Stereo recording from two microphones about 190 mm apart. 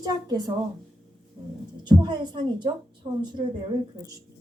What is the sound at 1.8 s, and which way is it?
A woman's voice, 25° right (ahead or behind).